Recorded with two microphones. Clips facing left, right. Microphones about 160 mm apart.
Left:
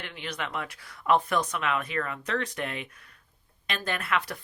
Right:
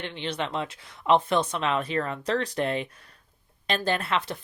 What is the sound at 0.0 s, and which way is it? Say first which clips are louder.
Speech: right 5 dB; 25° right (ahead or behind).